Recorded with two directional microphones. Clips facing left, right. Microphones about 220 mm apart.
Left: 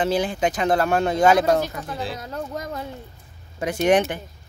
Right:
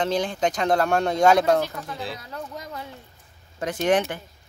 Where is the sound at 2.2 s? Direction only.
45° left (ahead or behind).